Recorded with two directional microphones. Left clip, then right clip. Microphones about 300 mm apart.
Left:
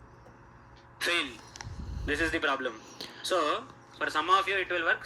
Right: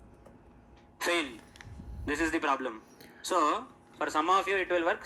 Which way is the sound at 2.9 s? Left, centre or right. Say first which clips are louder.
Left 10 dB; centre.